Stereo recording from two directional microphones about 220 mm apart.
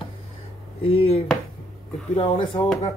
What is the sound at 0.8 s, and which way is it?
Speech, 25° left (ahead or behind).